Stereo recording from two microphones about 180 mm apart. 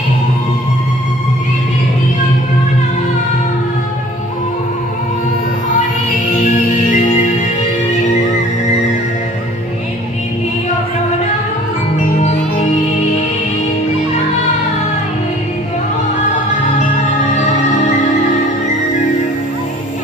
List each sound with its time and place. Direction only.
6.7 s music: 45° left (ahead or behind)